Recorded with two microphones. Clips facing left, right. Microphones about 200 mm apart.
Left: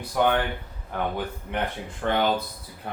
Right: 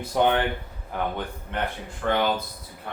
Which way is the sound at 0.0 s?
25° right (ahead or behind).